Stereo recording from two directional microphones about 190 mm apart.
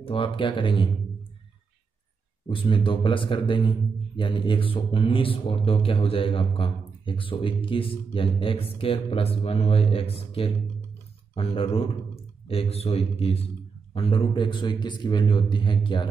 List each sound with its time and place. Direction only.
0.0 s a man's voice: 25° left (ahead or behind)
2.4 s a man's voice: 25° left (ahead or behind)